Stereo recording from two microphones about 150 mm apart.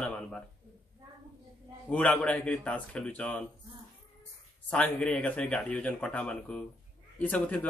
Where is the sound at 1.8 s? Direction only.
10° left (ahead or behind).